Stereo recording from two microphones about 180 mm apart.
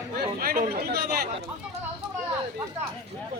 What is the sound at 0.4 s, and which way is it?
Speech, 55° right (ahead or behind).